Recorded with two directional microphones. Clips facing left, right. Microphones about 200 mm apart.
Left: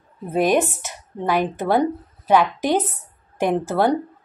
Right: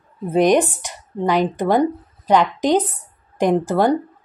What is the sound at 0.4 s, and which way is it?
Speech, 15° right (ahead or behind).